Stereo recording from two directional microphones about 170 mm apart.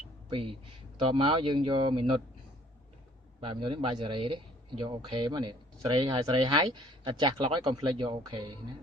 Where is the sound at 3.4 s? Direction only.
30° right (ahead or behind).